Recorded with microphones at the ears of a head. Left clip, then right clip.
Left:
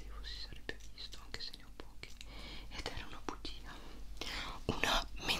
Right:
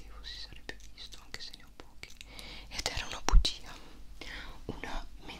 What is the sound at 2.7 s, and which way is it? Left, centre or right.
Whispering, right.